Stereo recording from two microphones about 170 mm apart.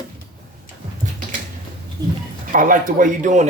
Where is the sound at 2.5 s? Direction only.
50° right (ahead or behind).